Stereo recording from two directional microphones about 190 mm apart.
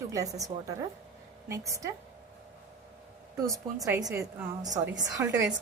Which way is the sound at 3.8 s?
15° right (ahead or behind).